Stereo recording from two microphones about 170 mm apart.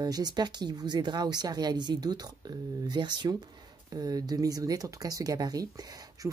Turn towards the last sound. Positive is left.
turn(degrees=-20)  # may be behind; listen again after turning